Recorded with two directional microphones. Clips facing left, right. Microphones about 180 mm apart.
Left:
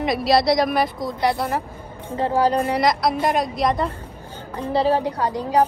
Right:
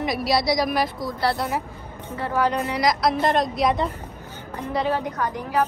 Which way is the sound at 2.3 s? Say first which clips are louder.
Left 3 dB; 30° left (ahead or behind).